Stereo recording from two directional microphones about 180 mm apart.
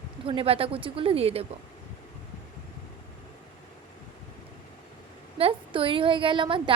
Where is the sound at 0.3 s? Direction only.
30° right (ahead or behind).